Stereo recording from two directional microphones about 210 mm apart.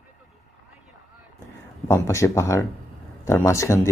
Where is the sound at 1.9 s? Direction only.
15° left (ahead or behind).